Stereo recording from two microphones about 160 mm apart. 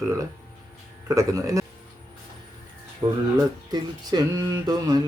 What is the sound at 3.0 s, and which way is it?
Speech, 30° right (ahead or behind).